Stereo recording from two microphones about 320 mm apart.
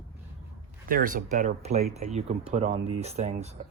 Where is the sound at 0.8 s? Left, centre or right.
Right.